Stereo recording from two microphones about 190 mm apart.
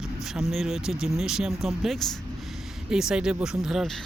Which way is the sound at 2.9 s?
5° right (ahead or behind).